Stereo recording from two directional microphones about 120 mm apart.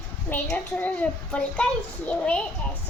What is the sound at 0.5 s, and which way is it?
A child's voice, 15° left (ahead or behind).